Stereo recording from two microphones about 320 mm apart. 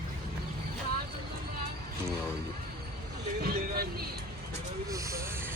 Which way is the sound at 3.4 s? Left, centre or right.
Right.